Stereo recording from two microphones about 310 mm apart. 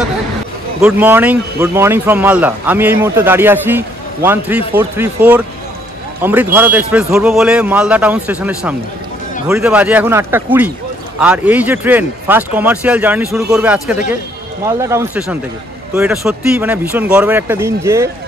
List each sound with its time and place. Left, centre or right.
0.7 s speech: centre